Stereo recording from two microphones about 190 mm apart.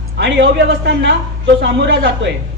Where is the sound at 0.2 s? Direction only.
60° right (ahead or behind).